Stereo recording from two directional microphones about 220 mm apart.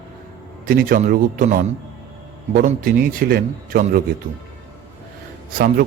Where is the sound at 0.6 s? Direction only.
40° right (ahead or behind).